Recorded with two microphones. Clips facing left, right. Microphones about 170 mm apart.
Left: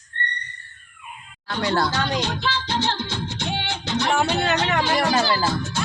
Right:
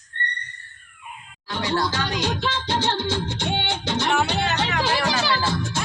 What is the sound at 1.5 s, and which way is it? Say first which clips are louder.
Speech: left 2 dB; 60° left (ahead or behind).